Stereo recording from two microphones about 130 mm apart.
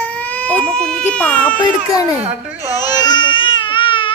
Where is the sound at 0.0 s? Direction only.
10° left (ahead or behind).